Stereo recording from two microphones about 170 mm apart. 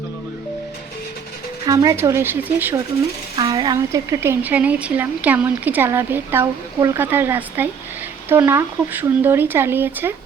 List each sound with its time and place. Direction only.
1.6 s a woman's voice: 20° right (ahead or behind)
3.5 s a woman's voice: 20° right (ahead or behind)